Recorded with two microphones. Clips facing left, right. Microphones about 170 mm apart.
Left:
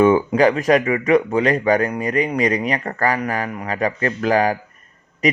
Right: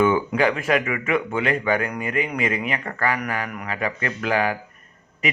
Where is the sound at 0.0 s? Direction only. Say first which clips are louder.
Left 5 dB; 35° left (ahead or behind).